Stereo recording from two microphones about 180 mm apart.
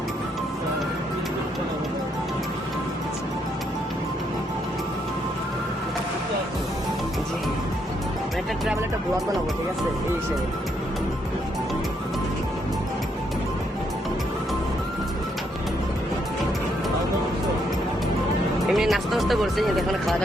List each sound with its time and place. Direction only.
18.7 s music: centre (ahead or behind)